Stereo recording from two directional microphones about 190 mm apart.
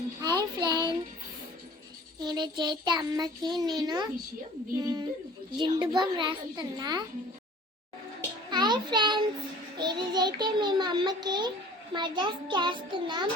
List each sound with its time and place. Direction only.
0.2 s child singing: 20° right (ahead or behind)
2.2 s a child's voice: 20° right (ahead or behind)
8.4 s child singing: 25° right (ahead or behind)
9.7 s a child's voice: 20° right (ahead or behind)